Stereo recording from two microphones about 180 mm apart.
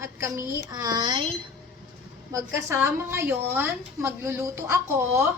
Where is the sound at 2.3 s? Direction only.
15° right (ahead or behind).